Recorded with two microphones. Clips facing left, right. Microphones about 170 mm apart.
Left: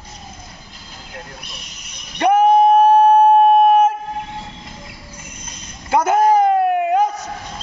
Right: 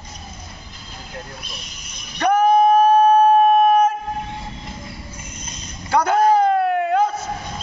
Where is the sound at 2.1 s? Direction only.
25° left (ahead or behind).